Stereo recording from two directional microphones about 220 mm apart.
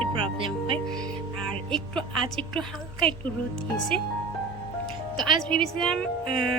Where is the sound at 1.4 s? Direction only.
5° left (ahead or behind).